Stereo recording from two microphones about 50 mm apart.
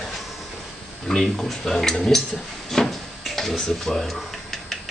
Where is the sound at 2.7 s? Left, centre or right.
Centre.